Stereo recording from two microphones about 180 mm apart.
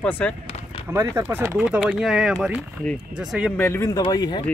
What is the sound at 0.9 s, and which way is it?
Speech, 15° right (ahead or behind).